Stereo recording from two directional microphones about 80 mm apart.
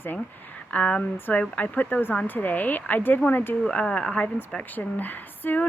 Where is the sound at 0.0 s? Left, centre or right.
Left.